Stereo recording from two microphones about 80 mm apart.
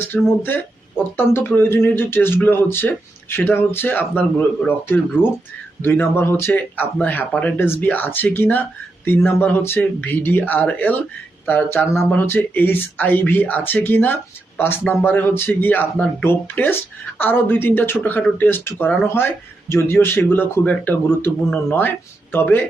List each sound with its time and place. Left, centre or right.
0.1 s speech: centre
1.1 s speech: left
5.2 s speech: centre
5.8 s speech: left